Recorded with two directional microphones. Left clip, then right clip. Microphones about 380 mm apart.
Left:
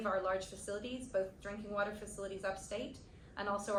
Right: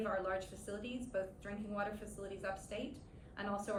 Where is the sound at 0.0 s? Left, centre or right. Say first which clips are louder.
Left 3 dB; centre.